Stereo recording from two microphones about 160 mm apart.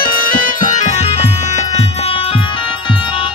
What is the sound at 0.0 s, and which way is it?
Music, 65° left (ahead or behind).